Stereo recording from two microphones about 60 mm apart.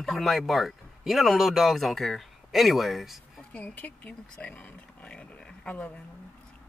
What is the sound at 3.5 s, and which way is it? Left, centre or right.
Speech, left.